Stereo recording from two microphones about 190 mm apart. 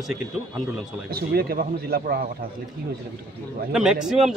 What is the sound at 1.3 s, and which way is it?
Speech, 55° right (ahead or behind).